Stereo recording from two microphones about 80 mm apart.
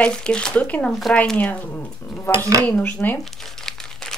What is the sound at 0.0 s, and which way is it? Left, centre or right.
Speech, centre.